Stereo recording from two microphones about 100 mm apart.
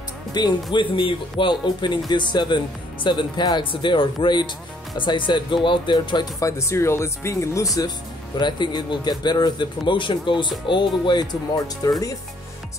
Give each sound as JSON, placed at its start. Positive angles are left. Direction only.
{"t": 0.3, "sound": "speech", "side_deg": 45}
{"t": 6.4, "sound": "speech", "side_deg": 30}
{"t": 8.4, "sound": "speech", "side_deg": 50}
{"t": 11.5, "sound": "speech", "side_deg": 35}